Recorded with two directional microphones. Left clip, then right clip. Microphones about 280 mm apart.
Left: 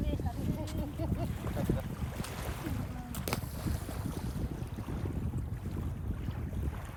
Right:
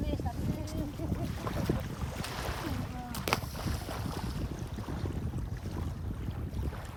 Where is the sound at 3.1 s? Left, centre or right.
Centre.